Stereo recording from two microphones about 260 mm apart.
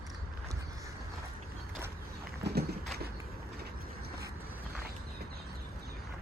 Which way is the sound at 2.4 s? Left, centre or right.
Right.